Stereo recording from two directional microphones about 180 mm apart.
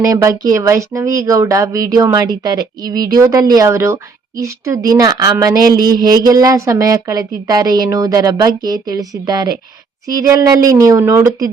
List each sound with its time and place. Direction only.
0.0 s speech: 15° right (ahead or behind)